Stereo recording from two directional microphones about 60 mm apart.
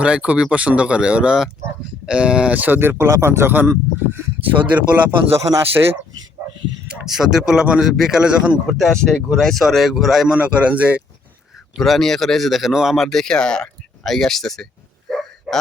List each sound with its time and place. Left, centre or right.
0.0 s speech: centre
2.6 s speech: right
4.1 s speech: right
5.3 s speech: right
6.8 s speech: centre
8.2 s speech: centre
8.8 s speech: centre
10.3 s speech: centre
11.8 s speech: centre
13.1 s speech: centre
15.1 s a sound: centre